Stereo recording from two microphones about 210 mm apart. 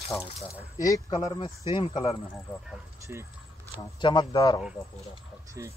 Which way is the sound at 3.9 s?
20° left (ahead or behind).